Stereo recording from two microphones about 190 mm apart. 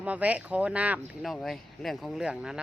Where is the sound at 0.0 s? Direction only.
5° right (ahead or behind).